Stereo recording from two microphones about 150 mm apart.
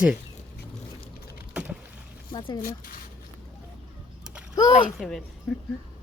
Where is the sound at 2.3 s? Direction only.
30° left (ahead or behind).